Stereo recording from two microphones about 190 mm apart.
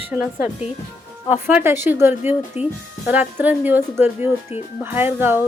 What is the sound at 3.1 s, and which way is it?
Speech, 10° right (ahead or behind).